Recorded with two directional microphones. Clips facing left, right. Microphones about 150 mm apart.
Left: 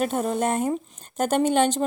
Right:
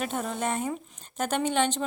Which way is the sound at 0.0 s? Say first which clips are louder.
Left 6 dB; 40° left (ahead or behind).